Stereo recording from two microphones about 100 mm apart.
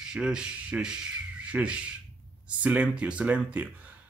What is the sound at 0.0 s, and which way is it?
Speech, 5° right (ahead or behind).